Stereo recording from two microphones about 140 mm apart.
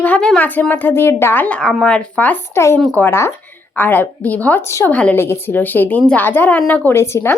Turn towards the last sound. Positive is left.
turn(degrees=20)  # may be behind; listen again after turning